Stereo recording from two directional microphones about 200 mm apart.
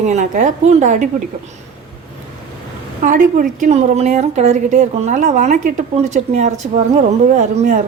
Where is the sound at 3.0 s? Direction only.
40° right (ahead or behind).